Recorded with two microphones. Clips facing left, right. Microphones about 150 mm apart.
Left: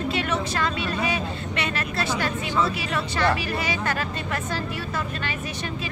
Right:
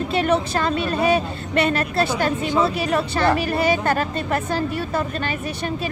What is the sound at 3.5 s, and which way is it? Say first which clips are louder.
Speech: right 7 dB; 50° right (ahead or behind).